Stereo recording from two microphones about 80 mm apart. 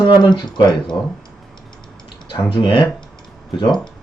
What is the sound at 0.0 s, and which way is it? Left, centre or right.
Speech, left.